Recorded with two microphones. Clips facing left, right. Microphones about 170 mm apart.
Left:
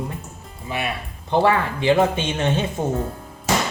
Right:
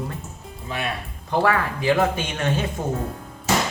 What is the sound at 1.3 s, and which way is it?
Speech, 25° left (ahead or behind).